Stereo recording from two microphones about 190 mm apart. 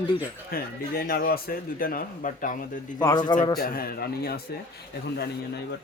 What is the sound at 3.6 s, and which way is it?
A man's voice, 50° left (ahead or behind).